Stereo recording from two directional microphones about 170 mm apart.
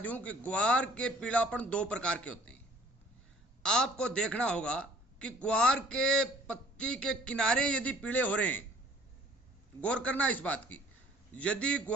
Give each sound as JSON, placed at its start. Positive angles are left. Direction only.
{"t": 0.0, "sound": "a man's voice", "side_deg": 10}
{"t": 3.6, "sound": "a man's voice", "side_deg": 5}
{"t": 9.8, "sound": "a man's voice", "side_deg": 5}